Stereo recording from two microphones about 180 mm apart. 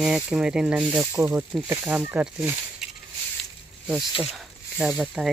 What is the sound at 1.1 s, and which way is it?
Speech, 15° right (ahead or behind).